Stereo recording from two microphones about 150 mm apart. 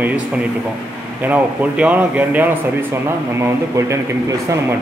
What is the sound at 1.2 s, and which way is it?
A man's voice, 10° right (ahead or behind).